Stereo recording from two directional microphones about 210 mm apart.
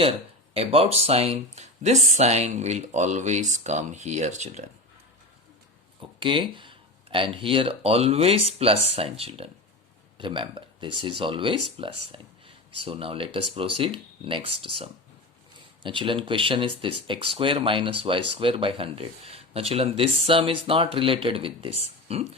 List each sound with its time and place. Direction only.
0.5 s speech: 30° right (ahead or behind)
6.0 s speech: 25° right (ahead or behind)